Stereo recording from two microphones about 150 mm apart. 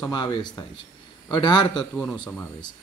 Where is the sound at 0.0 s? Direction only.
30° left (ahead or behind).